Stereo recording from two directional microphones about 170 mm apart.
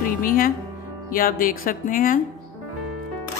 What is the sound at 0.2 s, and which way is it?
Speech, 55° left (ahead or behind).